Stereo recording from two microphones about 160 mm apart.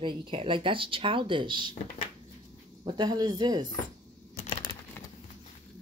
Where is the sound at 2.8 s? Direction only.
25° right (ahead or behind).